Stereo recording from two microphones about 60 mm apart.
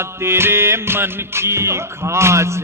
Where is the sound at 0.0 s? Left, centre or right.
Right.